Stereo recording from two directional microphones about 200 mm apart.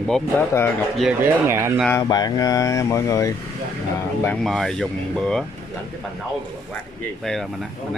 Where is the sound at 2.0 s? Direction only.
20° left (ahead or behind).